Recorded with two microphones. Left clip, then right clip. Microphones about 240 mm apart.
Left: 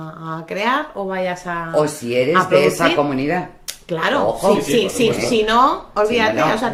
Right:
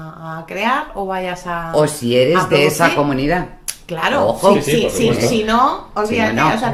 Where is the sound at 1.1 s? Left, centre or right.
Right.